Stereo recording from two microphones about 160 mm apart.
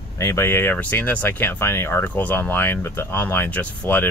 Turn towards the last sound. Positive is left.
turn(degrees=10)  # may be behind; listen again after turning